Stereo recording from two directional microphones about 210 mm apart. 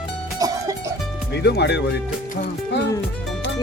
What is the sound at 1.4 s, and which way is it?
Speech, 55° left (ahead or behind).